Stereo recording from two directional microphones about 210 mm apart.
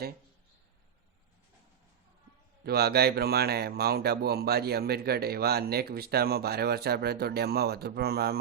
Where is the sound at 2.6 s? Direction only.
50° right (ahead or behind).